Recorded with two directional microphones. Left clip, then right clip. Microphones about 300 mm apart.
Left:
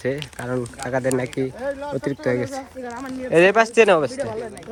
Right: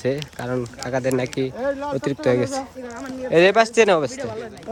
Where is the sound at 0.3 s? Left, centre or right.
Centre.